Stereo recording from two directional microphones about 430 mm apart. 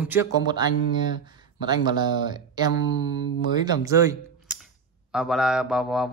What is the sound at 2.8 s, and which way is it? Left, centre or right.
Mantra, left.